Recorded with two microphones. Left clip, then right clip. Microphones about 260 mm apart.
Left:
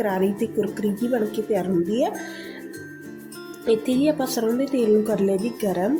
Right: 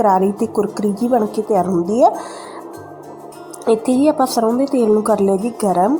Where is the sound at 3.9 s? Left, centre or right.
Centre.